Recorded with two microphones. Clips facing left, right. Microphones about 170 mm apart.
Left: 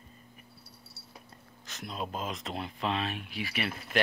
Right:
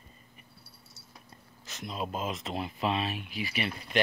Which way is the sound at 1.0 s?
20° right (ahead or behind).